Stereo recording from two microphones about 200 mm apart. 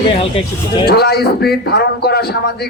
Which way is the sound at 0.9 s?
55° left (ahead or behind).